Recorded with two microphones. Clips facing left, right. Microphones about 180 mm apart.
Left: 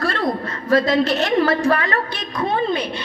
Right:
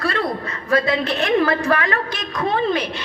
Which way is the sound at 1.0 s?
35° left (ahead or behind).